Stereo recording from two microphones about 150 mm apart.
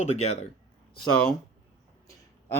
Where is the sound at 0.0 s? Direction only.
45° left (ahead or behind).